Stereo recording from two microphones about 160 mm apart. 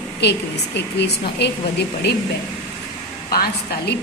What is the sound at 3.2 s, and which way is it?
Speech, 75° left (ahead or behind).